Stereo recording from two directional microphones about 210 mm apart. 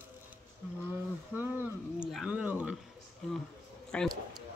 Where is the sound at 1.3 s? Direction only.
5° right (ahead or behind).